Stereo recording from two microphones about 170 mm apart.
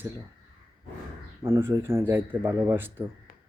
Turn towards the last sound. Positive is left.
turn(degrees=55)  # may be behind; listen again after turning